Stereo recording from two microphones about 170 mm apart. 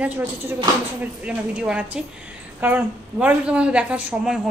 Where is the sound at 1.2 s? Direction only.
5° right (ahead or behind).